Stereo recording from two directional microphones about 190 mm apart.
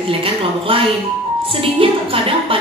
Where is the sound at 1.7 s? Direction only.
30° right (ahead or behind).